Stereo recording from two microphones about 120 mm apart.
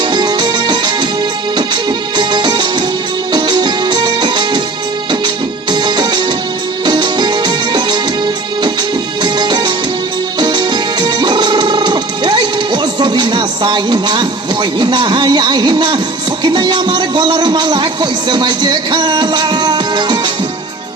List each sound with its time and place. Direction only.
0.0 s music: 35° right (ahead or behind)
5.7 s music: 35° right (ahead or behind)
9.2 s music: 35° right (ahead or behind)
16.4 s speech: 40° right (ahead or behind)